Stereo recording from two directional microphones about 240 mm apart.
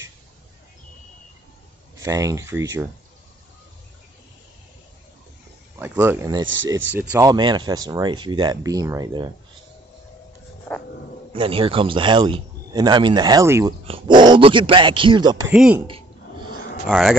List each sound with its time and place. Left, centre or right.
2.0 s speech: centre
5.8 s speech: centre
6.4 s speech: right
6.9 s speech: centre
11.3 s speech: right
15.5 s speech: centre